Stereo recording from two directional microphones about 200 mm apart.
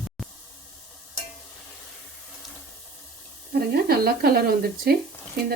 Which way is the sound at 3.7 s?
50° right (ahead or behind).